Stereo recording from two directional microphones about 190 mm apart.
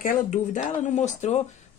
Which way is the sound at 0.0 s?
40° left (ahead or behind).